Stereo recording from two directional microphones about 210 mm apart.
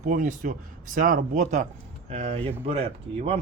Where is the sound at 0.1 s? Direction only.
40° right (ahead or behind).